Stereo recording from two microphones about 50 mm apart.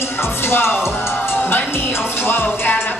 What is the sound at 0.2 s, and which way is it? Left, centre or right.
Speech, left.